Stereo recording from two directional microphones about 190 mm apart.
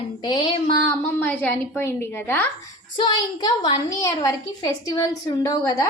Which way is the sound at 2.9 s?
20° left (ahead or behind).